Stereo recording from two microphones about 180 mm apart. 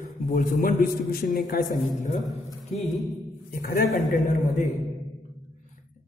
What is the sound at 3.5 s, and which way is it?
A man's voice, 50° left (ahead or behind).